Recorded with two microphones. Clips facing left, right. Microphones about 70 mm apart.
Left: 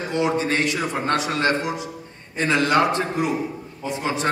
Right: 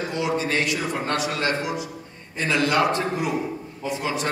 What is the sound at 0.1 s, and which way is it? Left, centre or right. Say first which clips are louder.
A man's voice: left 4 dB; left.